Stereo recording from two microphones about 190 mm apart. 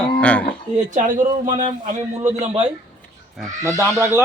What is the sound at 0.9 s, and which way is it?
A man's voice, 45° right (ahead or behind).